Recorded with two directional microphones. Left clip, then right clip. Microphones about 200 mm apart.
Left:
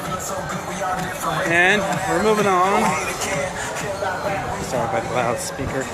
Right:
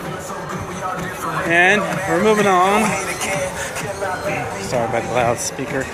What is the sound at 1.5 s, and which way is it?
Speech, 20° right (ahead or behind).